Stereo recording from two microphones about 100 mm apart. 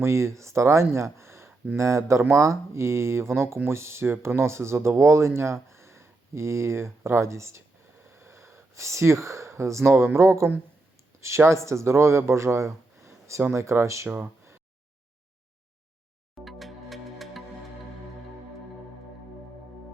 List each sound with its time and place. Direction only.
0.0 s speech: 25° right (ahead or behind)
8.1 s a sound: 30° right (ahead or behind)
9.9 s speech: 25° right (ahead or behind)
16.3 s music: centre (ahead or behind)